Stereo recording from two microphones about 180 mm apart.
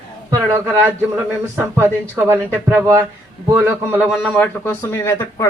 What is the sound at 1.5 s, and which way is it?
Speech, 10° right (ahead or behind).